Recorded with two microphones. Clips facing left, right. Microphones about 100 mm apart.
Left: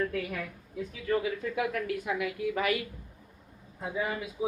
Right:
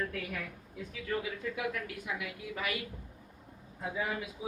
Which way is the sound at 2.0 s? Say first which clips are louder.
Left 8 dB; 55° left (ahead or behind).